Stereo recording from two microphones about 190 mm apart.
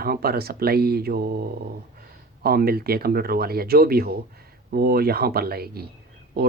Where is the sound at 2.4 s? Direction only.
55° right (ahead or behind).